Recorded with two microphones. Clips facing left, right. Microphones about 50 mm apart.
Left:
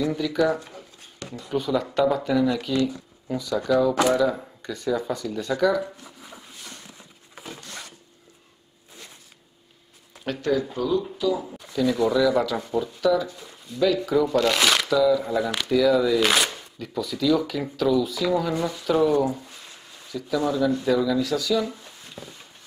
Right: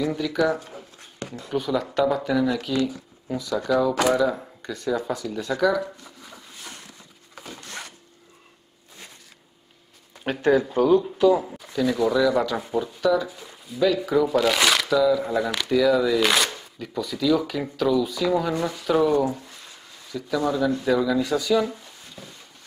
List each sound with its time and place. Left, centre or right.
0.0 s speech: centre
1.5 s speech: centre
10.2 s speech: right
11.5 s speech: centre